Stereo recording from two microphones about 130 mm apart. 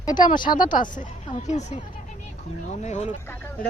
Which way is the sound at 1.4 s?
60° left (ahead or behind).